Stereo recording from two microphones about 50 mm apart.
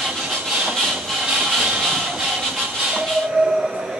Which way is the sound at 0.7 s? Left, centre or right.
Centre.